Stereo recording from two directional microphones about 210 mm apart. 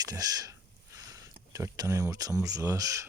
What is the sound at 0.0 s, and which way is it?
Speech, 15° right (ahead or behind).